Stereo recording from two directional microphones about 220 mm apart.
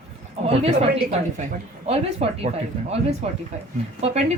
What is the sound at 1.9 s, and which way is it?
Speech, 25° right (ahead or behind).